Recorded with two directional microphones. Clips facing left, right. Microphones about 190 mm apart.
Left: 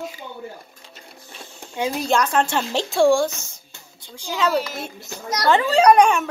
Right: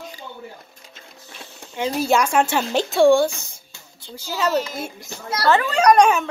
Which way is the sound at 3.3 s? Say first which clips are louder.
Even; 35° right (ahead or behind).